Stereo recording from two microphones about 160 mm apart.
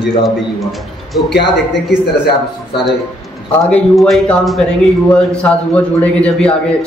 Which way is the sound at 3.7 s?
Centre (ahead or behind).